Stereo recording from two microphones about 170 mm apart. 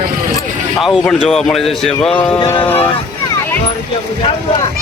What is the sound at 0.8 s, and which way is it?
Speech, centre (ahead or behind).